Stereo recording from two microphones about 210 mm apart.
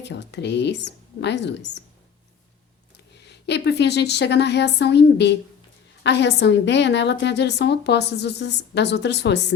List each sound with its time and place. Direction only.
0.0 s a woman's voice: 55° left (ahead or behind)
3.2 s a woman's voice: 55° left (ahead or behind)